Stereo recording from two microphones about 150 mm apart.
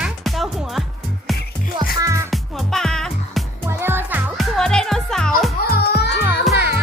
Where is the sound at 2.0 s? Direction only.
20° right (ahead or behind).